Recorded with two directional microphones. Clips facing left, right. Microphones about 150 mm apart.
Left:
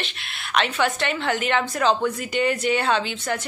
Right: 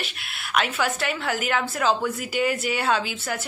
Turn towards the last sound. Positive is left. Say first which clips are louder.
# left 2 dB
turn(degrees=-5)  # may be behind; listen again after turning